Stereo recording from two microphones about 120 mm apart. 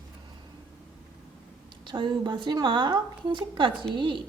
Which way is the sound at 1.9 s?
40° right (ahead or behind).